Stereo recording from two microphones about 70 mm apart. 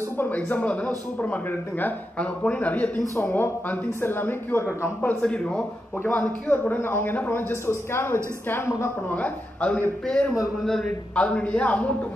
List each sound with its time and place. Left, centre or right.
0.2 s speech: left
3.2 s speech: left
3.6 s speech: left
5.2 s speech: centre; by 8.7 s left
9.1 s speech: centre
10.4 s a man's voice: centre
10.8 s speech: centre